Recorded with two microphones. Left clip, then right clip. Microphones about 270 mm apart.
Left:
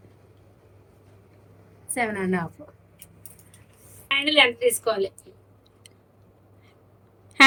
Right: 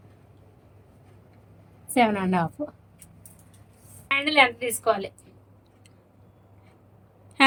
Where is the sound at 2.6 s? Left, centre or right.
Right.